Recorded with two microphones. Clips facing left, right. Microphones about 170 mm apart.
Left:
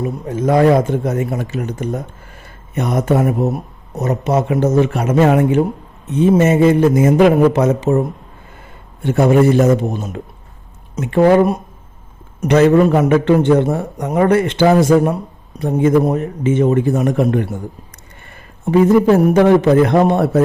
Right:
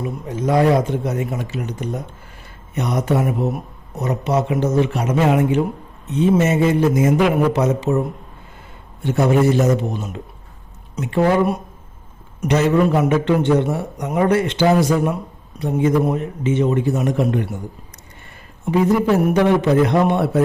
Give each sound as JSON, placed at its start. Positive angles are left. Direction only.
{"t": 0.3, "sound": "a man's voice", "side_deg": 50}
{"t": 9.0, "sound": "a man's voice", "side_deg": 55}
{"t": 18.6, "sound": "a man's voice", "side_deg": 50}